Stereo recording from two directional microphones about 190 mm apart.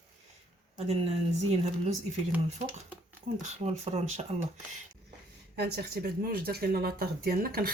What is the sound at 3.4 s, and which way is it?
Speech, 35° right (ahead or behind).